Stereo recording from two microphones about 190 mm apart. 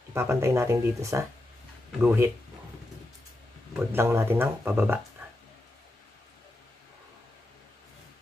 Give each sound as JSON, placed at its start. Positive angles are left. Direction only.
{"t": 0.1, "sound": "speech", "side_deg": -15}
{"t": 3.7, "sound": "speech", "side_deg": -10}